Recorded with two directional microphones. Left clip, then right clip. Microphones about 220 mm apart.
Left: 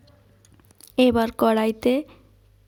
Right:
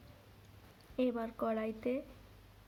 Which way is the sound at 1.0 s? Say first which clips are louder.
Left 17 dB; 50° left (ahead or behind).